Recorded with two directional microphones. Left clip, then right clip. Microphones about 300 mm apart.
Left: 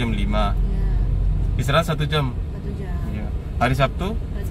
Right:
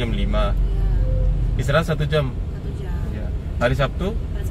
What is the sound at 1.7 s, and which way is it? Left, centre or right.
Speech, left.